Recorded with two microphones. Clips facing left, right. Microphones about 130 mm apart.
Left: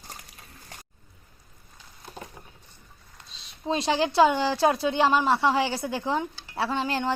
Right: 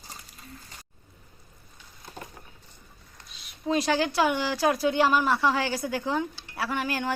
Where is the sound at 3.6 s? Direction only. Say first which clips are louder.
Even; 25° left (ahead or behind).